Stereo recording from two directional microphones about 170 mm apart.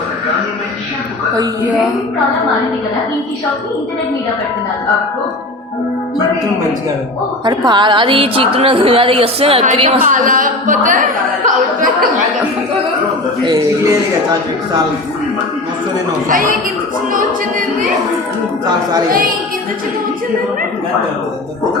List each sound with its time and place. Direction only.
7.4 s a woman's voice: 25° right (ahead or behind)
10.0 s speech: 50° right (ahead or behind)
13.4 s a man's voice: 20° right (ahead or behind)
16.3 s speech: 55° right (ahead or behind)